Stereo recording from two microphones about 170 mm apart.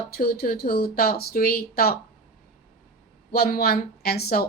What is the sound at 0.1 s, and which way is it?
Speech, 65° left (ahead or behind).